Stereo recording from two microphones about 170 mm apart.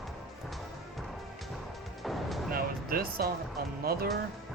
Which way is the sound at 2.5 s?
60° right (ahead or behind).